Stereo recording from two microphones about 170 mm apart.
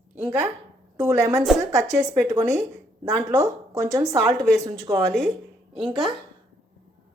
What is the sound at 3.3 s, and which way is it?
Speech, 20° right (ahead or behind).